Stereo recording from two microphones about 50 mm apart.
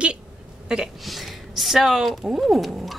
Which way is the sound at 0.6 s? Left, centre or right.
Centre.